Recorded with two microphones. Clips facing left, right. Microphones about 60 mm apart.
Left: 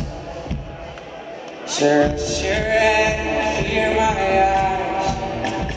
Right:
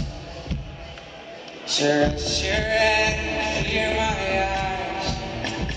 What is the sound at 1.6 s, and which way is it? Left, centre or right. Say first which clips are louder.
Music: left 5 dB; centre.